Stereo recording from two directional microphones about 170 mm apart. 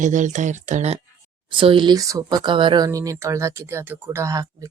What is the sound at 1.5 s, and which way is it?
Speech, 30° right (ahead or behind).